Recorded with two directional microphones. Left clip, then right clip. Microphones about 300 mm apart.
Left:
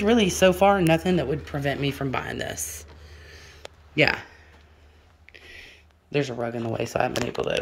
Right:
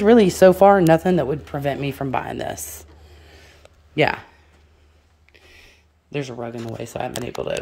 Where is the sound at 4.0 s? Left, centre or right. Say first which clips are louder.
Right 2 dB; centre.